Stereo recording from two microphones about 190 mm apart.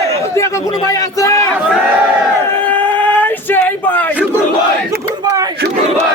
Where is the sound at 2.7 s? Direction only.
10° left (ahead or behind).